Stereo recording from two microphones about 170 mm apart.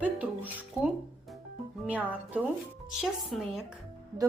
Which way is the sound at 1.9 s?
10° right (ahead or behind).